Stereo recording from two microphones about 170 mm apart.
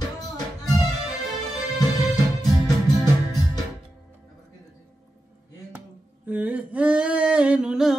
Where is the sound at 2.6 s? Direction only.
20° left (ahead or behind).